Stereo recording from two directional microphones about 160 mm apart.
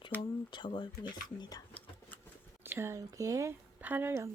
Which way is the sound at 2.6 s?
15° right (ahead or behind).